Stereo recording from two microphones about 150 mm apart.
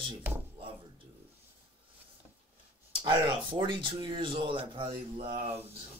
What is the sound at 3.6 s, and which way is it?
Speech, 35° right (ahead or behind).